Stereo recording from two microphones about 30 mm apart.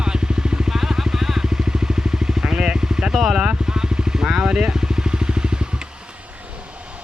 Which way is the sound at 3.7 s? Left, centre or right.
Right.